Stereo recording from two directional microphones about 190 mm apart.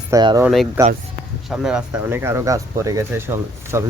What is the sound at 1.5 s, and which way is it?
Speech, 5° right (ahead or behind).